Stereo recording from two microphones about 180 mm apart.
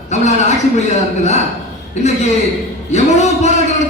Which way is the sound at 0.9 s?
40° left (ahead or behind).